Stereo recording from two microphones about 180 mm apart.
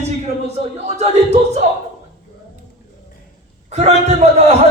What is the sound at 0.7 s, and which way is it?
Speech, 35° right (ahead or behind).